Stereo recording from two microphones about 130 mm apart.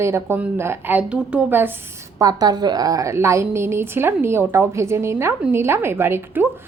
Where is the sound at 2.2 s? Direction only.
30° right (ahead or behind).